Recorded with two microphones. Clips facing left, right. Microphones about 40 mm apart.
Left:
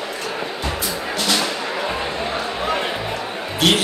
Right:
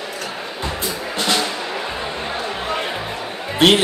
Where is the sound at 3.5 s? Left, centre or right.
Right.